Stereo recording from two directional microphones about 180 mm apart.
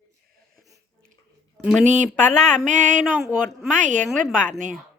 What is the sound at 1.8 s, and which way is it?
Speech, 40° right (ahead or behind).